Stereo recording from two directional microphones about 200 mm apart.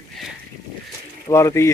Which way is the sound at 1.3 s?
15° left (ahead or behind).